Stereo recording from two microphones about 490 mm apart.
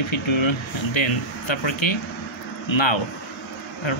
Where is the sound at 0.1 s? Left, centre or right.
Left.